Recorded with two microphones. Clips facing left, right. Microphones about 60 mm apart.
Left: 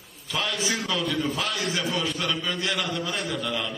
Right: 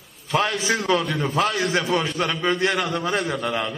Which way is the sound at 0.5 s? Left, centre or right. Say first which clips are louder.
Right 6 dB; right.